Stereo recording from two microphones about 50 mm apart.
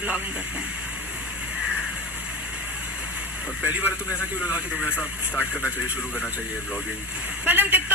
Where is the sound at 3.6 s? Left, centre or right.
Right.